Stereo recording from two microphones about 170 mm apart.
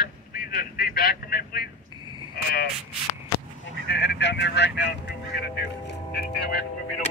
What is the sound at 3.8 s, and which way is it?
Speech, 90° left.